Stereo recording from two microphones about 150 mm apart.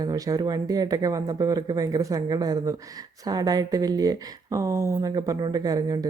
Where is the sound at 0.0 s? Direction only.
25° right (ahead or behind).